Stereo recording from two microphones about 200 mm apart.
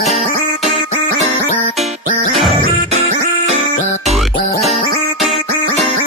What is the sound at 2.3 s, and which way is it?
Music, centre (ahead or behind).